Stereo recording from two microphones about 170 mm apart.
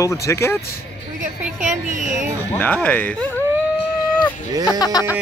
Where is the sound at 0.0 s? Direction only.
15° left (ahead or behind).